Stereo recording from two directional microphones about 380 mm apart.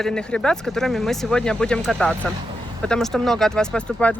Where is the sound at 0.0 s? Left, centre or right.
Centre.